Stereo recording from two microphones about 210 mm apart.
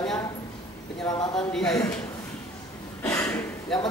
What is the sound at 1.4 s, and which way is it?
Speech, 5° left (ahead or behind).